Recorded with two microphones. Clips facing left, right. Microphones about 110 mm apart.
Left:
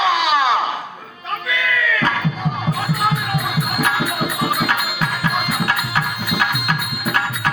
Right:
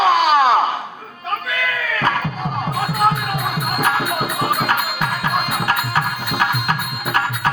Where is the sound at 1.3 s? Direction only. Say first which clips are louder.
Left 1 dB; 45° right (ahead or behind).